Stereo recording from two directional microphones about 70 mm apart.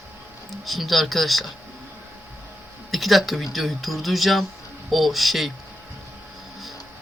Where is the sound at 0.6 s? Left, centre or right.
Centre.